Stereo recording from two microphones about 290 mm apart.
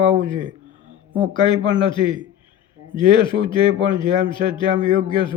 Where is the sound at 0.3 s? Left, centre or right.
Centre.